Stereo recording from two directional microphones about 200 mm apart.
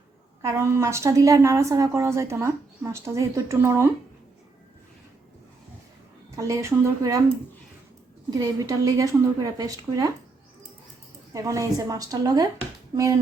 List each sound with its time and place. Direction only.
0.4 s a woman's voice: 15° right (ahead or behind)
6.3 s a woman's voice: 15° right (ahead or behind)
8.3 s a woman's voice: 15° right (ahead or behind)
11.3 s a woman's voice: 15° right (ahead or behind)